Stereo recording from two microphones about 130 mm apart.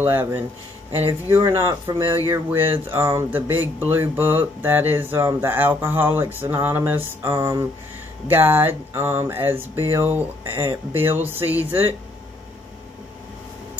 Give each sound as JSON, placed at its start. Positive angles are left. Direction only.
{"t": 0.0, "sound": "speech", "side_deg": -15}
{"t": 2.0, "sound": "speech", "side_deg": -20}